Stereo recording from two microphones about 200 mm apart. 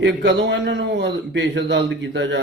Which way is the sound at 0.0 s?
60° right (ahead or behind).